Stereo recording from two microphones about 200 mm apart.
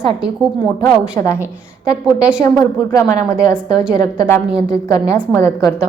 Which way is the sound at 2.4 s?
15° left (ahead or behind).